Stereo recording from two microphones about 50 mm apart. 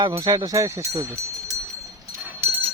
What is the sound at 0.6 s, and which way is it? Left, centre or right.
Speech, right.